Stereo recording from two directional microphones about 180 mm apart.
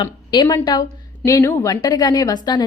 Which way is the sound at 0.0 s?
25° left (ahead or behind).